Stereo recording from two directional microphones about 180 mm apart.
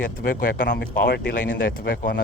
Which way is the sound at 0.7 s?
65° left (ahead or behind).